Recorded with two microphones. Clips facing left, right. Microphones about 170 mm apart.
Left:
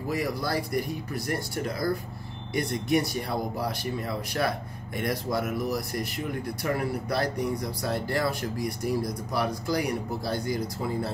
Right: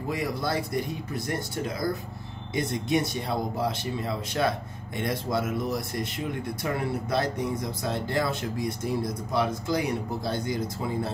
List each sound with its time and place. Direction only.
0.1 s speech: 25° right (ahead or behind)